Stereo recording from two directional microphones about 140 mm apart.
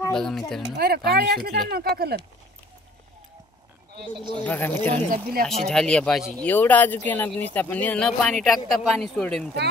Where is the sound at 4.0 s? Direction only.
35° right (ahead or behind).